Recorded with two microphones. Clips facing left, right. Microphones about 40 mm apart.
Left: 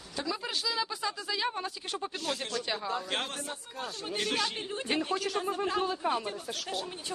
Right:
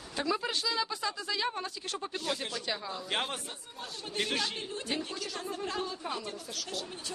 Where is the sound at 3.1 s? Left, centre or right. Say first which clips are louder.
Right 1 dB; centre.